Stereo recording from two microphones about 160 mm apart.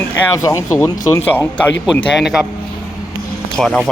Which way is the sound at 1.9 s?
5° left (ahead or behind).